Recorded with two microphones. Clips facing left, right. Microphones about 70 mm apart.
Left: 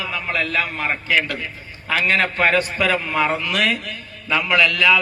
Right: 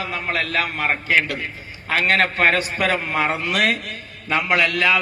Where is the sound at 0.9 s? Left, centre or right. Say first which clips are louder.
Right 2 dB; right.